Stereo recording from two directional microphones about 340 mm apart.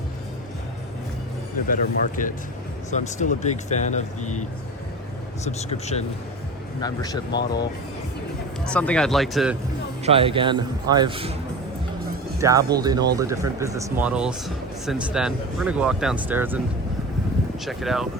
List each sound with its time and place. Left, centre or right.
1.6 s speech: left
5.5 s speech: centre
8.6 s speech: centre
10.1 s a man's voice: centre
12.4 s a man's voice: centre
17.7 s speech: centre